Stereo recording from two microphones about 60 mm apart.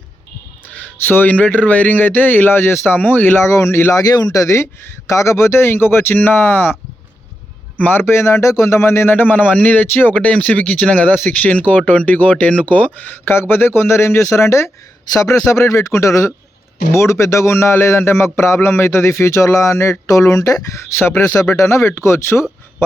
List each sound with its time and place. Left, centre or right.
1.0 s speech: left
3.4 s a man's voice: left
3.9 s a man's voice: left
5.0 s speech: left
7.8 s a man's voice: left
8.0 s a man's voice: left
9.1 s speech: left
10.2 s a man's voice: left
20.7 s speech: left
21.2 s a man's voice: left